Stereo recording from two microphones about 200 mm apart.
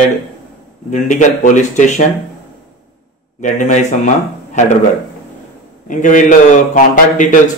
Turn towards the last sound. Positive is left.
turn(degrees=40)  # may be behind; listen again after turning